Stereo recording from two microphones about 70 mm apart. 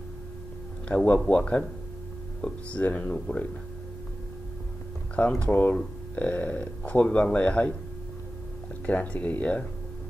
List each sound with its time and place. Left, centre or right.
0.8 s speech: centre
5.2 s speech: centre
8.8 s speech: centre